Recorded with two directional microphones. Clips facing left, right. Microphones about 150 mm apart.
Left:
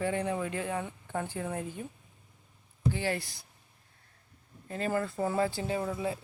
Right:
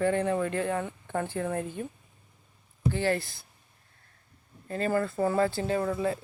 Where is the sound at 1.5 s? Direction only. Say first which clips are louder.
Right 4 dB; 55° right (ahead or behind).